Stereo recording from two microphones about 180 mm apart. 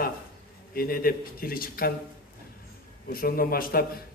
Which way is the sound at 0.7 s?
55° left (ahead or behind).